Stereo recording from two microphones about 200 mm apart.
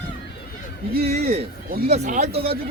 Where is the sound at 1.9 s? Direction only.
35° right (ahead or behind).